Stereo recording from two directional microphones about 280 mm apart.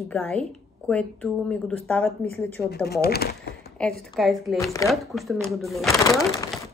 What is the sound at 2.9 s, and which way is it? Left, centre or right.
Speech, left.